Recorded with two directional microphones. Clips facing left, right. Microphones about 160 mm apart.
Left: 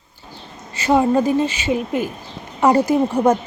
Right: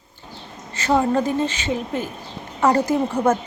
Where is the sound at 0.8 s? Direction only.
15° left (ahead or behind).